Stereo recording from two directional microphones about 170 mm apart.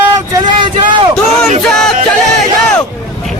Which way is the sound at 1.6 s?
5° left (ahead or behind).